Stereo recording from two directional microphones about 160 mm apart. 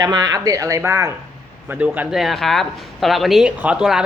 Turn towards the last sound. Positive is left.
turn(degrees=-5)  # may be behind; listen again after turning